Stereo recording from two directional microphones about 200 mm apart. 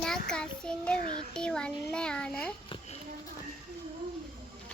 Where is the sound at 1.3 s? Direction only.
5° left (ahead or behind).